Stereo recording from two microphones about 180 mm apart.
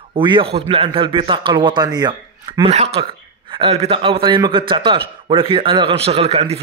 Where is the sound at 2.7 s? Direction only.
35° right (ahead or behind).